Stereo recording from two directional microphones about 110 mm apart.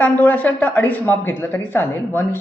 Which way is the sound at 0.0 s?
15° left (ahead or behind).